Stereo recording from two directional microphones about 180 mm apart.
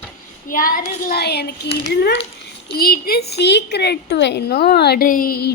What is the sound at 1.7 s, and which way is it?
A woman's voice, 65° left (ahead or behind).